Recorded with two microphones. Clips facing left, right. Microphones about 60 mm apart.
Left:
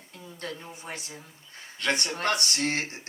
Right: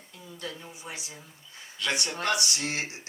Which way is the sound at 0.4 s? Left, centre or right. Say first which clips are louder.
Left 2 dB; left.